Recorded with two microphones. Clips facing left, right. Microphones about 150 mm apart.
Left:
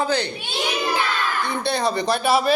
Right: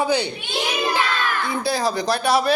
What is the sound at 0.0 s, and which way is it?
Speech, 10° right (ahead or behind).